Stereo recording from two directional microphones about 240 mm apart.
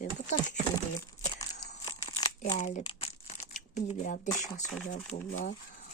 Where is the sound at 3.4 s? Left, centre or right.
Left.